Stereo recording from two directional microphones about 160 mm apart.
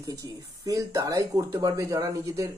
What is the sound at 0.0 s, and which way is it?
Speech, 20° right (ahead or behind).